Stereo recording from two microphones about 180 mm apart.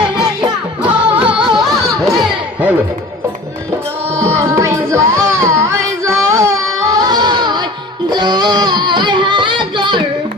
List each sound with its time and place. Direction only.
0.8 s music: 10° right (ahead or behind)
2.1 s crowd: 5° right (ahead or behind)
4.1 s music: 15° right (ahead or behind)